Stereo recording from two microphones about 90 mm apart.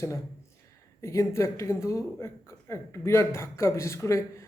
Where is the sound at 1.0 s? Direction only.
35° left (ahead or behind).